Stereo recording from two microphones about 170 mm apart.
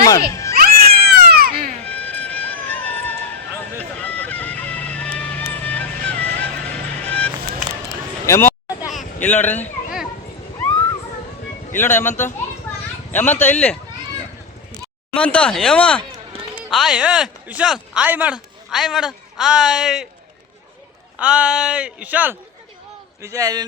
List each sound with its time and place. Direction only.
0.3 s speech: 20° left (ahead or behind)
0.5 s cat: 60° right (ahead or behind)
1.8 s run: 10° left (ahead or behind)
3.8 s music: 10° left (ahead or behind)
8.3 s a sound: 15° left (ahead or behind)
9.2 s speech: 10° left (ahead or behind)
11.7 s speech: 10° left (ahead or behind)
15.1 s speech: 5° left (ahead or behind)
21.2 s a man's voice: 5° right (ahead or behind)